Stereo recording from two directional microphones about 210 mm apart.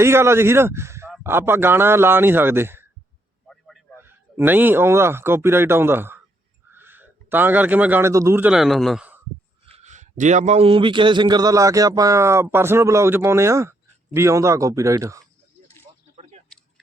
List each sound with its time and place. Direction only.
0.0 s a man's voice: 10° right (ahead or behind)
3.4 s a sound: centre (ahead or behind)
3.9 s speech: 10° right (ahead or behind)
9.6 s a man's voice: 30° right (ahead or behind); by 15.2 s 15° right (ahead or behind)